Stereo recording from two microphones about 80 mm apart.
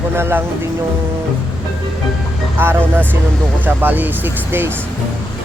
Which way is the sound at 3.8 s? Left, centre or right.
Right.